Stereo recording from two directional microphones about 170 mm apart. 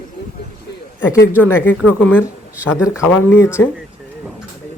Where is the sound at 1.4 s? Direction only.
15° left (ahead or behind).